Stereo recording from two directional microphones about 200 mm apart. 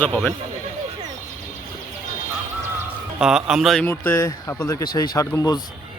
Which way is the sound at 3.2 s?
5° right (ahead or behind).